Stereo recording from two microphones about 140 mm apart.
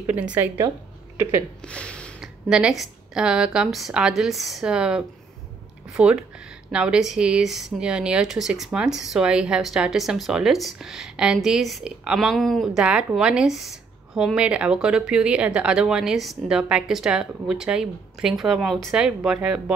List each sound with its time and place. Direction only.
0.0 s a woman's voice: 10° right (ahead or behind)
1.7 s a sound: 10° left (ahead or behind)
2.1 s a woman's voice: 5° right (ahead or behind)